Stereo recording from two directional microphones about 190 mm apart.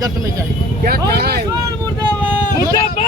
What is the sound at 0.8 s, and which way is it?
Speech, 55° right (ahead or behind).